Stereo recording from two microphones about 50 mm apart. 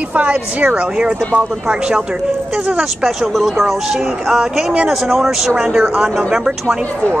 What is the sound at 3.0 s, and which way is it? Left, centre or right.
Speech, centre.